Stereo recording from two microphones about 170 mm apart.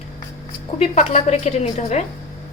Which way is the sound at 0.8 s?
40° left (ahead or behind).